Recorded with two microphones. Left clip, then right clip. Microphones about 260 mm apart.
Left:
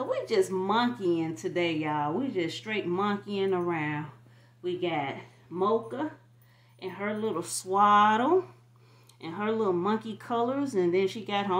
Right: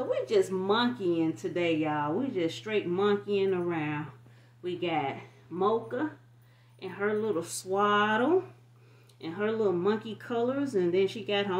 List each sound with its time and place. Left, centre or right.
0.2 s speech: left